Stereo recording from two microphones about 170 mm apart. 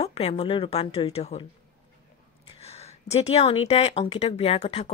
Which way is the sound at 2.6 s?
40° left (ahead or behind).